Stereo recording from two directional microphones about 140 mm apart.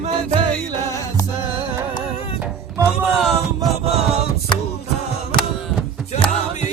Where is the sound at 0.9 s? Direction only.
20° left (ahead or behind).